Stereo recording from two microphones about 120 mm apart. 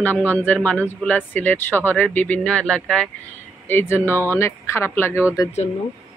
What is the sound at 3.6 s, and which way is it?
Speech, 20° left (ahead or behind).